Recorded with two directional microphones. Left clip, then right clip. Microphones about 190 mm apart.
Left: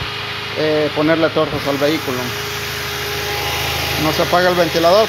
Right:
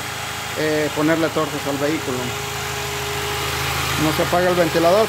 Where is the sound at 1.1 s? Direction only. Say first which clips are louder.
Left 5 dB; 5° right (ahead or behind).